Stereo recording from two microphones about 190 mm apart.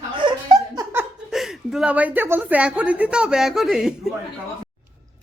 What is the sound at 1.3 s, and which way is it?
A woman's voice, centre (ahead or behind).